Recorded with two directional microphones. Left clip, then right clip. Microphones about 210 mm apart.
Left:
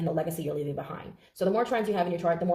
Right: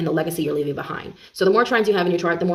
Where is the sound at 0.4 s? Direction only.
45° right (ahead or behind).